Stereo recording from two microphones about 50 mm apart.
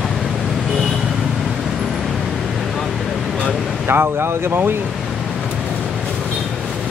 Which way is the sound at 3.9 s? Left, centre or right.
Right.